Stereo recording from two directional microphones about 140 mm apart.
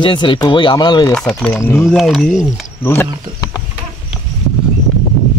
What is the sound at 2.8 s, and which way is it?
Speech, 20° left (ahead or behind).